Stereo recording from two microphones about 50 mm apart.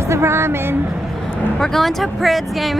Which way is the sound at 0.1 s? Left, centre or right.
Right.